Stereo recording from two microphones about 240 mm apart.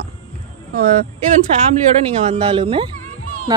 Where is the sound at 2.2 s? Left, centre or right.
Right.